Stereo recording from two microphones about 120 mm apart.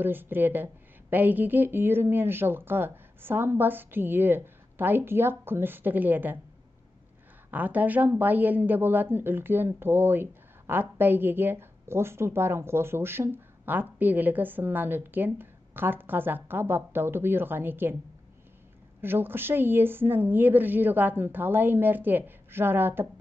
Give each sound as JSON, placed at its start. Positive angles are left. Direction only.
{"t": 0.0, "sound": "a woman's voice", "side_deg": -15}
{"t": 7.5, "sound": "a woman's voice", "side_deg": -15}
{"t": 18.9, "sound": "a woman's voice", "side_deg": -20}